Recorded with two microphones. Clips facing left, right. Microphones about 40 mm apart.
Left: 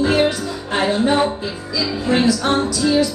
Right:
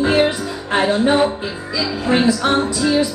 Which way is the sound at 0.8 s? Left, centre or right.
Centre.